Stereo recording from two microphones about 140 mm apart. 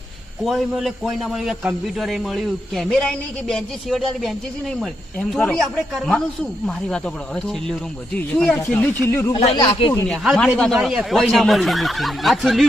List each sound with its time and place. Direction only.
0.4 s speech: centre (ahead or behind); by 9.3 s 15° left (ahead or behind)
9.6 s speech: 30° left (ahead or behind)
10.1 s speech: 5° left (ahead or behind)